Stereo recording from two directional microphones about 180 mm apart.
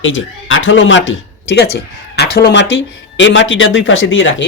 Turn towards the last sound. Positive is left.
turn(degrees=90)